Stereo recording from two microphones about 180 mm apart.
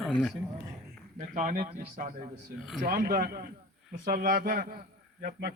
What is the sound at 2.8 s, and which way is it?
A man's voice, 55° right (ahead or behind).